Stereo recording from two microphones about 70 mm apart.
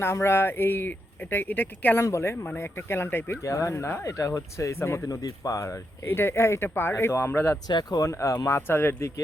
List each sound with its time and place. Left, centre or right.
0.0 s speech: left
2.0 s speech: left
2.3 s speech: left
2.6 s speech: left
3.4 s speech: left
4.0 s speech: left
5.0 s speech: left
7.7 s speech: left
8.0 s speech: left
8.6 s speech: left